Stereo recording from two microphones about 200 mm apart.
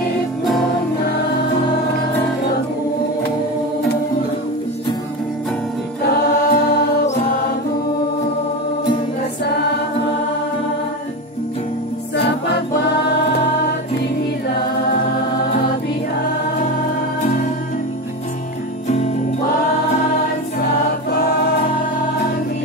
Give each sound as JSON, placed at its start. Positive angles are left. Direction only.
{"t": 6.2, "sound": "choir", "side_deg": 55}
{"t": 21.1, "sound": "music", "side_deg": 55}